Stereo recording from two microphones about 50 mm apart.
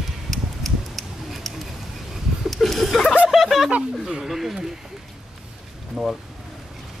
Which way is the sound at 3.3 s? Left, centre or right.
Centre.